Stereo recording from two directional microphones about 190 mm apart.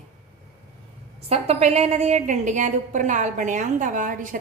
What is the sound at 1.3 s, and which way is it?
A woman's voice, 35° right (ahead or behind).